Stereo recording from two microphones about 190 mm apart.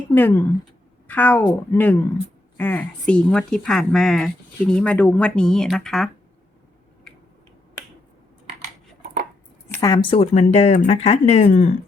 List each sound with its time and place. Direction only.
0.1 s a woman's voice: 10° left (ahead or behind)
9.7 s speech: 20° left (ahead or behind); by 11.7 s 35° left (ahead or behind)